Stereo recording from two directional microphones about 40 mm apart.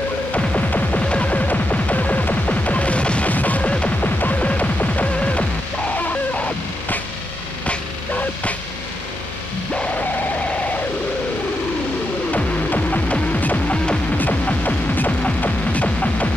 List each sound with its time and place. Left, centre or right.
0.6 s music: left
3.3 s music: left
5.9 s chicken: left
12.3 s music: left